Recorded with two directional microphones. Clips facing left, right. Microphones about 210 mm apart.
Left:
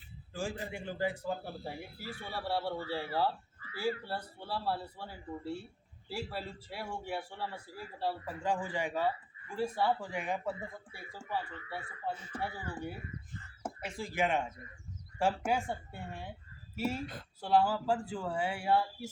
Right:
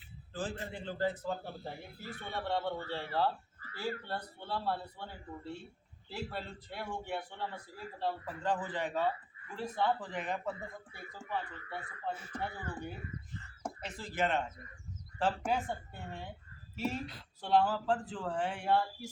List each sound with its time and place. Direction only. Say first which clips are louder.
0.3 s a man's voice: left 1 dB; 10° left (ahead or behind)
3.6 s a sound: left 1 dB; 40° right (ahead or behind)
4.0 s a man's voice: left 1 dB; 10° left (ahead or behind)